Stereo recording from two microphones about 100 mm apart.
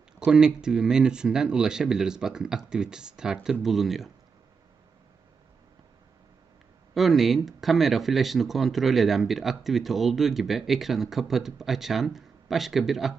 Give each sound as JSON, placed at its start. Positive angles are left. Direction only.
{"t": 0.2, "sound": "speech", "side_deg": -5}
{"t": 6.9, "sound": "speech", "side_deg": 0}